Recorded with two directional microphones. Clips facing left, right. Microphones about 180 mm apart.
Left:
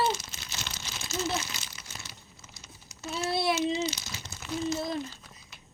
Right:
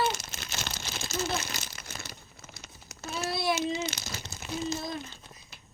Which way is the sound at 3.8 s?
50° right (ahead or behind).